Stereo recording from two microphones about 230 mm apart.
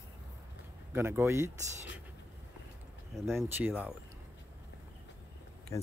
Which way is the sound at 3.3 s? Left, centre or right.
Centre.